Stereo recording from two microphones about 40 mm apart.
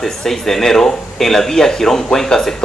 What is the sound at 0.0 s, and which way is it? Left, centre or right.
Speech, centre.